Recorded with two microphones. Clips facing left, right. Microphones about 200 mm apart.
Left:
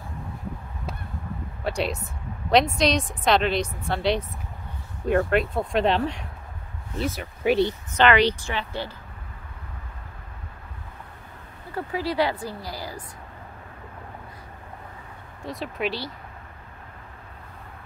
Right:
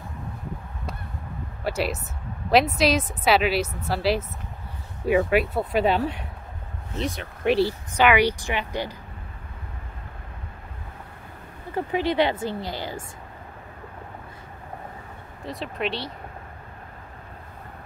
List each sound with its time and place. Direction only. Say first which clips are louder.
1.6 s a woman's voice: right 1 dB; 5° right (ahead or behind)
11.7 s speech: right 3 dB; 20° right (ahead or behind)
15.4 s a woman's voice: even; centre (ahead or behind)